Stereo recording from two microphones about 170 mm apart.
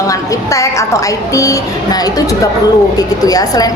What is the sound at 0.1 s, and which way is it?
A woman's voice, 20° left (ahead or behind).